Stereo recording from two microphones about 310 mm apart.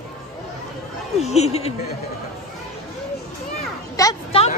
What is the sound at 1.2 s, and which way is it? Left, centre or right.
Speech, left.